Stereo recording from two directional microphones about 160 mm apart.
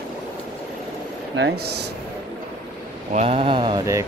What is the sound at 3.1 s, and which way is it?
Speech, 45° right (ahead or behind).